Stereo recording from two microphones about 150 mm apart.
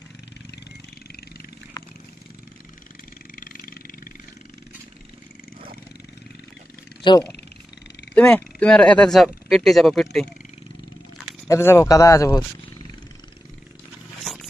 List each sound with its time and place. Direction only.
3.3 s vehicle: 65° left (ahead or behind)
7.0 s wild animals: 30° left (ahead or behind)
8.1 s speech: 10° left (ahead or behind)
11.4 s speech: 20° left (ahead or behind)
14.2 s a sound: centre (ahead or behind)